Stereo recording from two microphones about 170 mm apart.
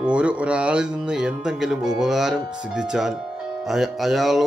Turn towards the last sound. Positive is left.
turn(degrees=0)  # may be behind; listen again after turning